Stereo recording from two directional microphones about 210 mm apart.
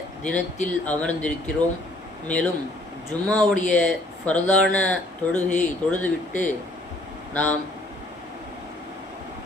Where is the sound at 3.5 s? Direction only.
35° left (ahead or behind).